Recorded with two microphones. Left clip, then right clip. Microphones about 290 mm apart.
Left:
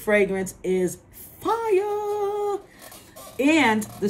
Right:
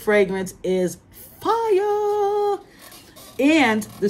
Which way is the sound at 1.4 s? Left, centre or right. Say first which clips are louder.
Right 3 dB; centre.